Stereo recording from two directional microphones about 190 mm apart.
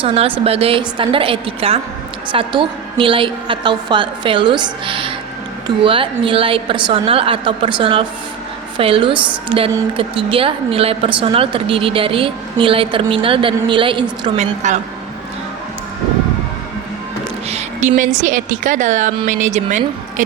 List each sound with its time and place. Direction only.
0.0 s a woman's voice: 30° right (ahead or behind)
17.5 s a sound: 40° right (ahead or behind)
18.2 s speech: 45° right (ahead or behind)